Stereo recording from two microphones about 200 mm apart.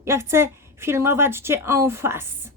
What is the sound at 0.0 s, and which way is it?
A woman's voice, 15° right (ahead or behind).